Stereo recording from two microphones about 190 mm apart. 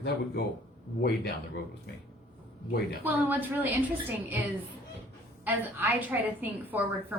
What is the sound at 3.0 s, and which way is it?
A woman's voice, 10° right (ahead or behind).